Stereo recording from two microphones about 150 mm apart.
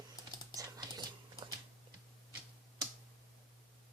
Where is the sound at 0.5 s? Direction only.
25° right (ahead or behind).